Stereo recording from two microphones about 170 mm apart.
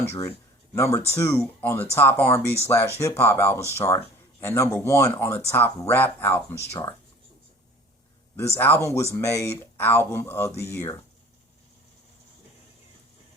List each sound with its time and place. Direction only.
0.1 s speech: 15° left (ahead or behind)
8.5 s speech: 10° left (ahead or behind)